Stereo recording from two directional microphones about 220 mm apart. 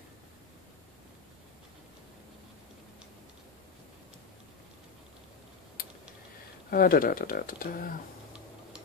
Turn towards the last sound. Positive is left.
turn(degrees=40)  # may be behind; listen again after turning